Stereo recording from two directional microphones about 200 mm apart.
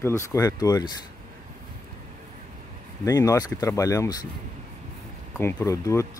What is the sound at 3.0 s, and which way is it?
Speech, 15° left (ahead or behind).